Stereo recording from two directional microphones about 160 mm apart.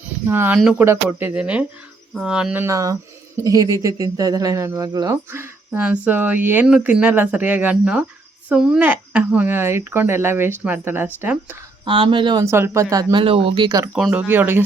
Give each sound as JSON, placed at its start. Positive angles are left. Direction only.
{"t": 0.0, "sound": "speech", "side_deg": -10}
{"t": 11.9, "sound": "speech", "side_deg": -30}
{"t": 12.5, "sound": "speech", "side_deg": -15}
{"t": 13.7, "sound": "speech", "side_deg": -20}
{"t": 13.9, "sound": "speech", "side_deg": -5}